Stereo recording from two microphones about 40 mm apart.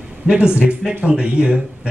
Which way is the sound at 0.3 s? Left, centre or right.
Right.